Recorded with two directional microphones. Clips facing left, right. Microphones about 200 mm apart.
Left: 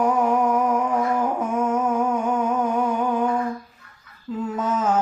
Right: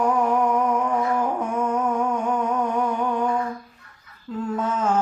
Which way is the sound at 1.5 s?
5° left (ahead or behind).